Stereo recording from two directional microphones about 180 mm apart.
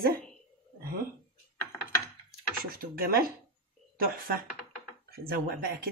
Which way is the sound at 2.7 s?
55° right (ahead or behind).